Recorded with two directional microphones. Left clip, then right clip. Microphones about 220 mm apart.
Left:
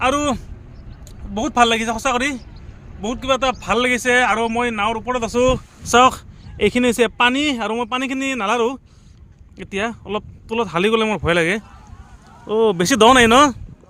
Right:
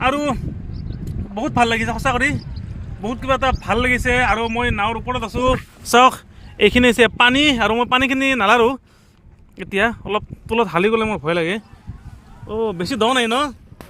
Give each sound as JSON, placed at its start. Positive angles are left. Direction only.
{"t": 0.0, "sound": "speech", "side_deg": 10}
{"t": 5.2, "sound": "speech", "side_deg": 40}
{"t": 5.9, "sound": "speech", "side_deg": 0}
{"t": 12.5, "sound": "speech", "side_deg": 20}